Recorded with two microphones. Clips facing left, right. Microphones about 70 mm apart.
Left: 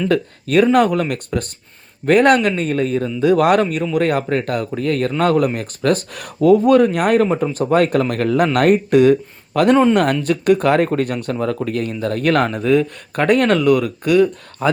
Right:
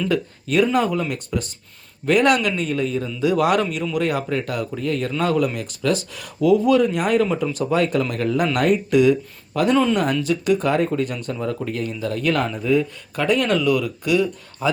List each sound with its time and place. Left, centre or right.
0.1 s speech: left
7.3 s speech: left